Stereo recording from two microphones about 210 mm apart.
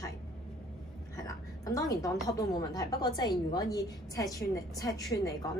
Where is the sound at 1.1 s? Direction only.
15° left (ahead or behind).